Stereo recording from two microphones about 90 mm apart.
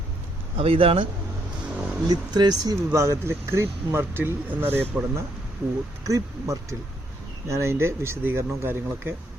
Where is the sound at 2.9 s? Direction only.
30° right (ahead or behind).